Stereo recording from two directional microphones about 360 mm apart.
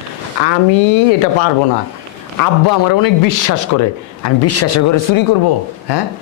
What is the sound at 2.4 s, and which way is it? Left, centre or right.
A man's voice, left.